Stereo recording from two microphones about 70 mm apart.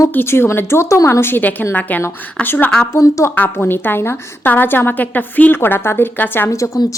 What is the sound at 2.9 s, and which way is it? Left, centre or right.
Speech, left.